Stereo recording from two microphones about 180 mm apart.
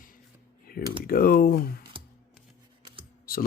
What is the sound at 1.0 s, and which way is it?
Speech, 55° left (ahead or behind).